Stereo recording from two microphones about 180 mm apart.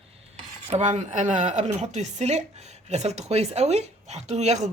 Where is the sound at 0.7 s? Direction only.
40° right (ahead or behind).